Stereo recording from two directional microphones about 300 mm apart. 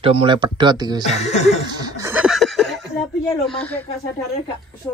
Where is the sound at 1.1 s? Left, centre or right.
Left.